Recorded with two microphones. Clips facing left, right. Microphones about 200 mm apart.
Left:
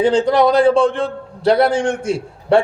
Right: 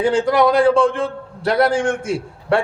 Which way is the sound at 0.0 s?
20° left (ahead or behind).